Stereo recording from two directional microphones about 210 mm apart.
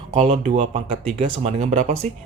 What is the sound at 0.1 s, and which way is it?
Speech, 35° right (ahead or behind).